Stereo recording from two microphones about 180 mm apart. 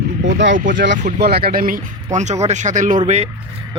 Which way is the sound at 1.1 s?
60° right (ahead or behind).